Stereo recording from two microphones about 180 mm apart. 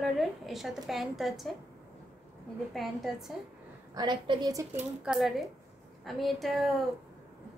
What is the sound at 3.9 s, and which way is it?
Speech, 25° right (ahead or behind).